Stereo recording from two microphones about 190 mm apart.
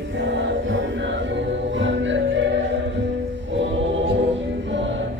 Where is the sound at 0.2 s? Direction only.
70° right (ahead or behind).